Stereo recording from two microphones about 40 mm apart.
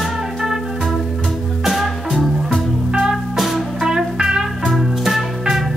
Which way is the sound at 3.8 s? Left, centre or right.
Centre.